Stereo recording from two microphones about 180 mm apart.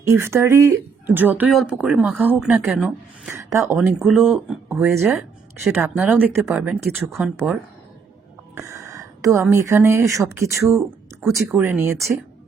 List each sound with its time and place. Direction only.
0.0 s a woman's voice: 15° right (ahead or behind)
3.8 s a woman's voice: 5° right (ahead or behind)
8.5 s speech: 15° right (ahead or behind)
11.3 s speech: centre (ahead or behind)
11.6 s a woman's voice: 10° right (ahead or behind)